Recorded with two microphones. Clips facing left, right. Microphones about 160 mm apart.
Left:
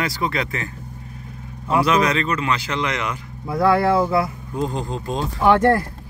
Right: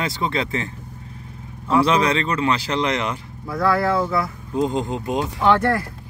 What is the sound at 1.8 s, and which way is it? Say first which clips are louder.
Speech: even; 30° right (ahead or behind).